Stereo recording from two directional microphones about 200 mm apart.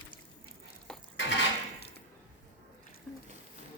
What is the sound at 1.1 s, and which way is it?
Cutlery, 65° left (ahead or behind).